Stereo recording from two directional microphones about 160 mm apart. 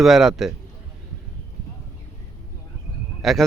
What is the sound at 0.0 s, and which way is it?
Speech, centre (ahead or behind).